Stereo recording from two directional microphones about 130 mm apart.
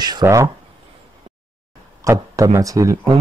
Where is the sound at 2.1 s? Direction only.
25° right (ahead or behind).